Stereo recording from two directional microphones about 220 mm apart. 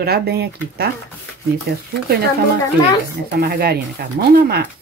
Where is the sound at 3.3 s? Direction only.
45° right (ahead or behind).